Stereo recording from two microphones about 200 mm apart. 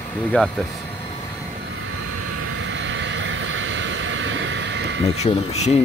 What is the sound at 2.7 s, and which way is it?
Vehicle, 65° right (ahead or behind).